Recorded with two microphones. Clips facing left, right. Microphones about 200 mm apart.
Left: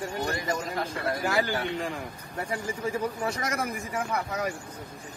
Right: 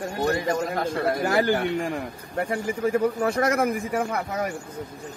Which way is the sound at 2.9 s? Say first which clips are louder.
Right 8 dB; 55° right (ahead or behind).